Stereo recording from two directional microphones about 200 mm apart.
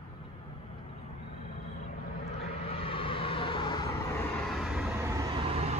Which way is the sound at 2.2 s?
30° left (ahead or behind).